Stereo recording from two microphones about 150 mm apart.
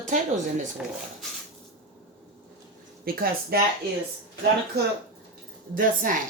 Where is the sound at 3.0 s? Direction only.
85° right.